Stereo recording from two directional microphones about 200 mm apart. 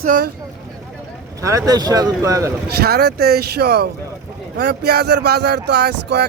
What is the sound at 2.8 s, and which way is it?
Speech, 50° right (ahead or behind).